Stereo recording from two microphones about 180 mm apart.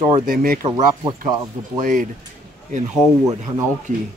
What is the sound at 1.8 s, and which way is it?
Speech, 50° right (ahead or behind).